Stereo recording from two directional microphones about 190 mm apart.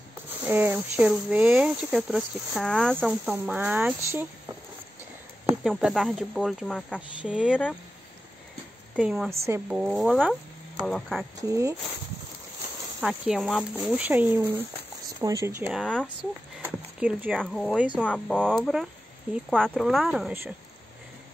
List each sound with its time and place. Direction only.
0.4 s speech: 10° right (ahead or behind)
5.6 s speech: centre (ahead or behind)
8.9 s speech: 5° right (ahead or behind)
9.8 s speech: 5° right (ahead or behind)
11.4 s speech: 15° right (ahead or behind)
13.0 s speech: 5° right (ahead or behind)
15.7 s speech: 5° left (ahead or behind)
16.6 s speech: 5° right (ahead or behind)
18.0 s speech: 5° left (ahead or behind)